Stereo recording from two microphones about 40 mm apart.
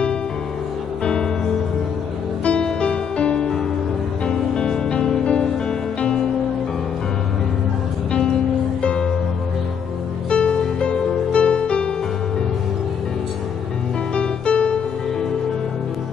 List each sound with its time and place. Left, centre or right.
1.0 s music: left
8.8 s music: left
10.3 s music: left
14.1 s music: left